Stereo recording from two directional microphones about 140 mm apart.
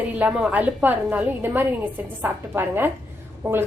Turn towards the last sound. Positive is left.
turn(degrees=-20)  # may be behind; listen again after turning